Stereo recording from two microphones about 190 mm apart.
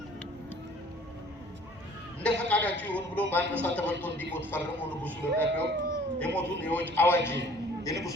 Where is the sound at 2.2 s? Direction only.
5° left (ahead or behind).